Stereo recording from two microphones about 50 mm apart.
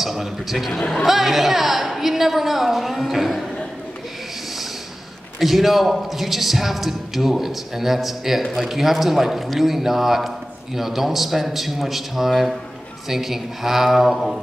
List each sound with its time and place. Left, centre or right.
0.0 s a man's voice: centre
5.4 s a man's voice: centre